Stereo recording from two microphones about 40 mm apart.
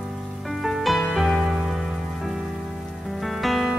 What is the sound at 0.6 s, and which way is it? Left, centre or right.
Music, centre.